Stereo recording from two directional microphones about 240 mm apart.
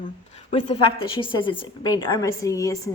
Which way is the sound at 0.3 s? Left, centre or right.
Left.